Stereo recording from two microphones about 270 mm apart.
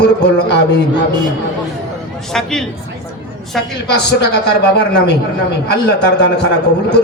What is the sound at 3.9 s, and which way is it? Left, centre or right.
A man's voice, left.